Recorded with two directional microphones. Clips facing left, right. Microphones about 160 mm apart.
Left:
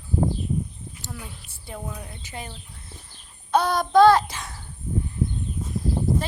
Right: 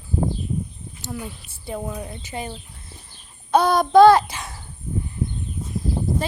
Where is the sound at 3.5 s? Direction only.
10° right (ahead or behind).